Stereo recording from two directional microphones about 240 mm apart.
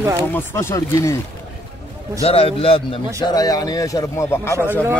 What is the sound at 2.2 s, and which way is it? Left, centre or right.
A man's voice, left.